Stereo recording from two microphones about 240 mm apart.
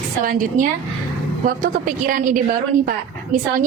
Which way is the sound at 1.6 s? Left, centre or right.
Right.